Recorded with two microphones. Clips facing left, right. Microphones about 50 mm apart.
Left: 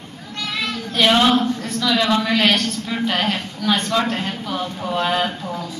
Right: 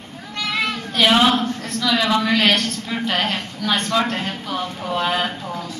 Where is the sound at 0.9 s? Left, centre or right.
Centre.